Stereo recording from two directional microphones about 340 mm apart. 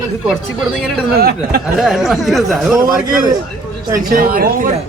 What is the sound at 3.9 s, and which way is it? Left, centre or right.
Speech, right.